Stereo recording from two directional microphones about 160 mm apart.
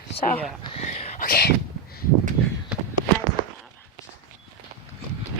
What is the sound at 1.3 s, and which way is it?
Speech, 70° left (ahead or behind).